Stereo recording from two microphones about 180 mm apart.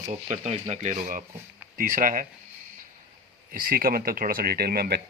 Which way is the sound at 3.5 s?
50° right (ahead or behind).